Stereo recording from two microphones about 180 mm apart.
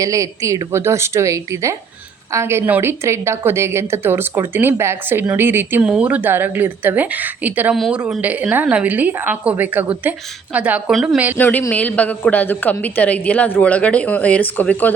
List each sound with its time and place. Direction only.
0.0 s a woman's voice: 20° right (ahead or behind)
11.3 s a woman's voice: 10° left (ahead or behind)